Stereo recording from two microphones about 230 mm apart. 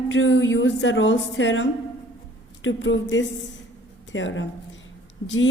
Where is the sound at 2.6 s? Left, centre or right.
Left.